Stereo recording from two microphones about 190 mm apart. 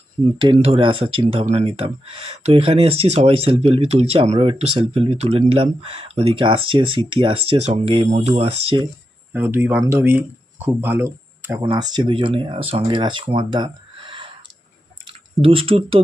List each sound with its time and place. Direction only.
0.3 s speech: 30° right (ahead or behind)
9.3 s speech: 10° right (ahead or behind)
11.6 s speech: 25° right (ahead or behind)